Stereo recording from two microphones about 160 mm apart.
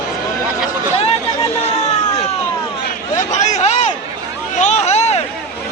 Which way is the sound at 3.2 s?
50° left (ahead or behind).